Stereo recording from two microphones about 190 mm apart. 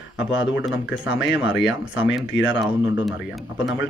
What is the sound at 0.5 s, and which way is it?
Speech, 5° right (ahead or behind).